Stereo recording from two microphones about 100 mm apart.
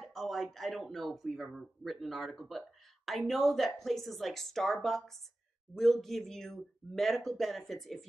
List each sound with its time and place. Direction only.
0.0 s speech: centre (ahead or behind)